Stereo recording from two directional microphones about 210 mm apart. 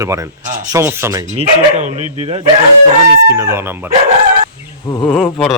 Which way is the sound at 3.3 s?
10° right (ahead or behind).